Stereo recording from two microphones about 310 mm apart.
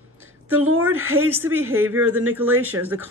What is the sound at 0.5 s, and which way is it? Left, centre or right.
Speech, right.